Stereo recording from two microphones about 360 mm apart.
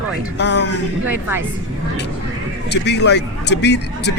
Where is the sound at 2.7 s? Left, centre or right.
Left.